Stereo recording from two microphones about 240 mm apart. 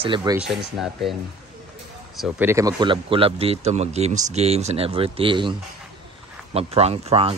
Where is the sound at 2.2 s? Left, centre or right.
Centre.